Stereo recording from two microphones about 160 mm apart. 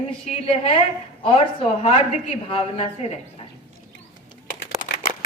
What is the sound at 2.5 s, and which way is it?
Speech, 40° left (ahead or behind).